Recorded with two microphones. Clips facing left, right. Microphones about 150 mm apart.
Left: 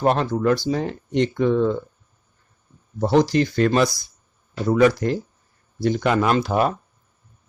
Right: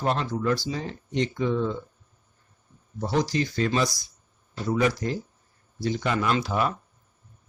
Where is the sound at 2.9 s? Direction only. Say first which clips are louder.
Left 8 dB; 65° left (ahead or behind).